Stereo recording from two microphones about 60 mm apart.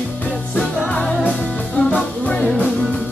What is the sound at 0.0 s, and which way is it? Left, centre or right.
Music, left.